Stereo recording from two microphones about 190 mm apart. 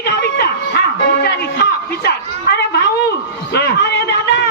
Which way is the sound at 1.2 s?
60° left (ahead or behind).